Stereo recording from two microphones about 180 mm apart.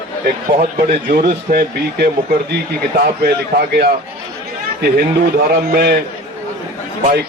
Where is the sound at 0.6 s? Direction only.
60° right (ahead or behind).